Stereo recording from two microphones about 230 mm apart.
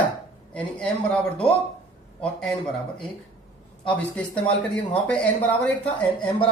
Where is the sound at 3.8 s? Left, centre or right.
Centre.